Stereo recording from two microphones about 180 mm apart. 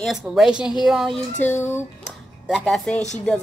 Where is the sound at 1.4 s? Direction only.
15° left (ahead or behind).